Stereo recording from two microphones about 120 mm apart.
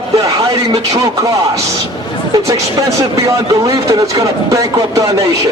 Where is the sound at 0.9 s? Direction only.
30° right (ahead or behind).